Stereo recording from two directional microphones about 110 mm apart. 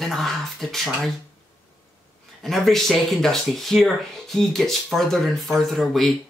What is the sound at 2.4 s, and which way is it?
Speech, centre (ahead or behind).